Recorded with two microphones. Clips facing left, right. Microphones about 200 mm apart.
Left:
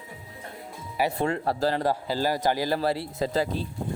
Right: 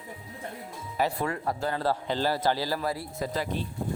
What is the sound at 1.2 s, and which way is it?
Speech, 30° left (ahead or behind).